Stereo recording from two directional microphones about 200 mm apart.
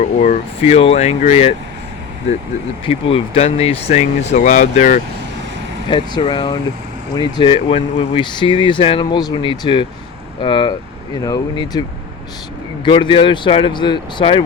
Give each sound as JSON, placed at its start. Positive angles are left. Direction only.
{"t": 0.2, "sound": "speech", "side_deg": 35}
{"t": 2.8, "sound": "speech", "side_deg": 30}
{"t": 5.9, "sound": "speech", "side_deg": 25}
{"t": 12.8, "sound": "speech", "side_deg": 25}